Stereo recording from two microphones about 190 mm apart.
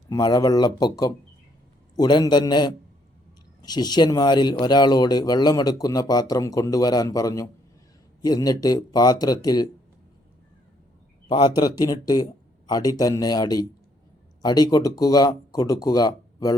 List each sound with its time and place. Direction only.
0.1 s speech: 20° left (ahead or behind)
11.3 s speech: 20° left (ahead or behind)